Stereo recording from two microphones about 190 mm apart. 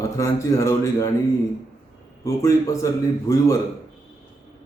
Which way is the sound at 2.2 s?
15° left (ahead or behind).